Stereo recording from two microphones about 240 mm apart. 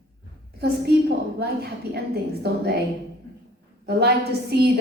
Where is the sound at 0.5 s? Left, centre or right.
Right.